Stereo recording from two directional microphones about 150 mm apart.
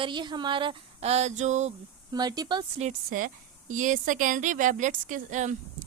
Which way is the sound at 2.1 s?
25° right (ahead or behind).